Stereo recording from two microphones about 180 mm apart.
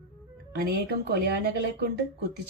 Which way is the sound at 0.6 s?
65° right (ahead or behind).